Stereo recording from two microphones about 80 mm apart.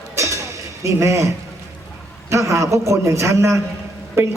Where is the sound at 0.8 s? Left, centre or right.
Right.